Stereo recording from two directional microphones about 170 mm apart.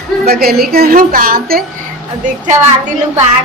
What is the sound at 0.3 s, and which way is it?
A woman's voice, 65° right (ahead or behind).